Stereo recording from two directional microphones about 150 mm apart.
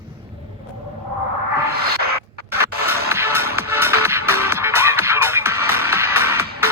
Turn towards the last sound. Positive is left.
turn(degrees=-15)  # may be behind; listen again after turning